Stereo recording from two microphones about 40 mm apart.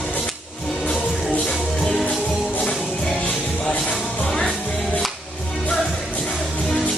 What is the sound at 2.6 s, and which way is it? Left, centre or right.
Music, left.